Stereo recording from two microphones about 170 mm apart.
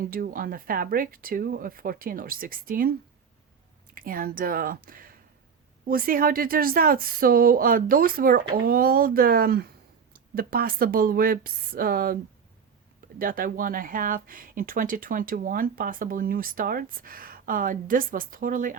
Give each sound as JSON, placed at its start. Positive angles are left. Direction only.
{"t": 0.1, "sound": "speech", "side_deg": -55}
{"t": 3.9, "sound": "speech", "side_deg": -55}